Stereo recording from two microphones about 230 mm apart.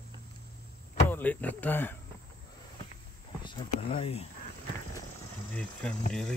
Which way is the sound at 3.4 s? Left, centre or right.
Left.